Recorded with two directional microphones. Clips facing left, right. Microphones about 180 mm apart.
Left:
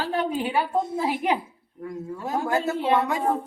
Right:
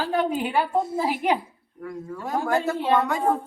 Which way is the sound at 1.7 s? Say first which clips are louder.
Left 1 dB; 20° left (ahead or behind).